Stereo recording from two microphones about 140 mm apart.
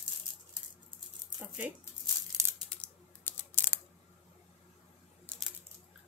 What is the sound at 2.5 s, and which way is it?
Scissors, 5° left (ahead or behind).